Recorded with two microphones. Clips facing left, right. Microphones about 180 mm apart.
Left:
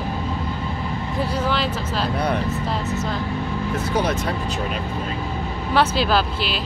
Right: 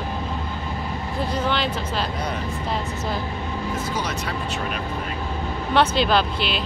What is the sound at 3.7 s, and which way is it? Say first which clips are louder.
Speech: left 8 dB; 60° left (ahead or behind).